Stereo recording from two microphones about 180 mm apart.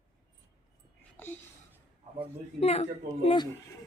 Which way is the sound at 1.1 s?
10° left (ahead or behind).